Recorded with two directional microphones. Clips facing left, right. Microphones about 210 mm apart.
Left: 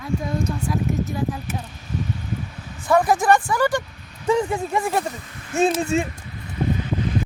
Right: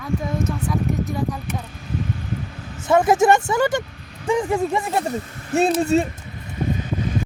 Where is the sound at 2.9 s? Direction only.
25° right (ahead or behind).